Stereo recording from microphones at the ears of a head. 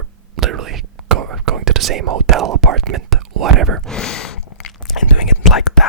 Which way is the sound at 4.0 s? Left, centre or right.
Left.